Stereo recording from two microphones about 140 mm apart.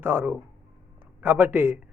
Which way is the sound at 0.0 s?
15° right (ahead or behind).